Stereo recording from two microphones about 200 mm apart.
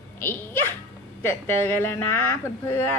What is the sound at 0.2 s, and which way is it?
A child's voice, 10° left (ahead or behind).